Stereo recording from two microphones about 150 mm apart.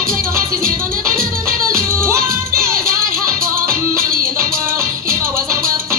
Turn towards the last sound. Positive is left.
turn(degrees=-20)  # may be behind; listen again after turning